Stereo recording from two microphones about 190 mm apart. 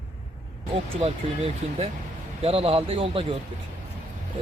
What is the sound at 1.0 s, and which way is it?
A man's voice, 30° right (ahead or behind).